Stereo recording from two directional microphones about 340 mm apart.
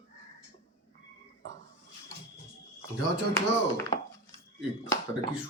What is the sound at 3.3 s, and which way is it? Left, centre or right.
Speech, centre.